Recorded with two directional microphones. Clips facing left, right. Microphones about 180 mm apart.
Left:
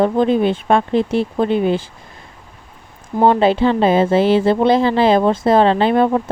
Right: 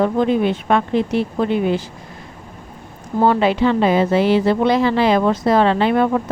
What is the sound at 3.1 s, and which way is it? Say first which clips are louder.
A woman's voice: left 2 dB; 20° left (ahead or behind).